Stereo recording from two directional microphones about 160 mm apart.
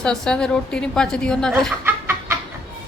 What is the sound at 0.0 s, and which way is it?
A woman's voice, 5° left (ahead or behind).